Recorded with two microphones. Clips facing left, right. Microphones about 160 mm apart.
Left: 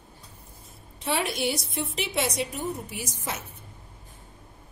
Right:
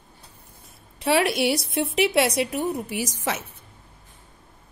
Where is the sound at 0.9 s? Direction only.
70° right (ahead or behind).